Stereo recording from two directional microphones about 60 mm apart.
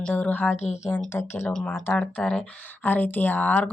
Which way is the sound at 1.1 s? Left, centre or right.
Left.